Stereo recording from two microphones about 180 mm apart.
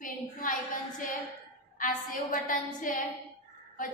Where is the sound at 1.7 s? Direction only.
50° left (ahead or behind).